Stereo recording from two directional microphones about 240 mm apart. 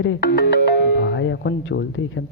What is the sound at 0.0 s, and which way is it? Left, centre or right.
Speech, left.